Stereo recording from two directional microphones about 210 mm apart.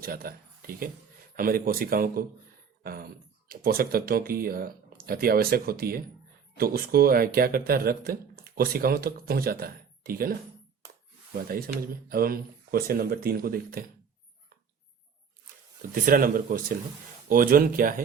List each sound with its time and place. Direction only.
0.0 s speech: 45° right (ahead or behind)
11.4 s speech: 45° right (ahead or behind)
16.0 s speech: 40° right (ahead or behind)